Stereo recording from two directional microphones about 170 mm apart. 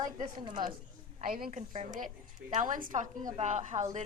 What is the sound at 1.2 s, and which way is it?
Speech, 55° right (ahead or behind).